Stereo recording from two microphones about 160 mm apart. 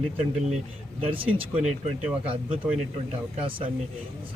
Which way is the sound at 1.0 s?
35° right (ahead or behind).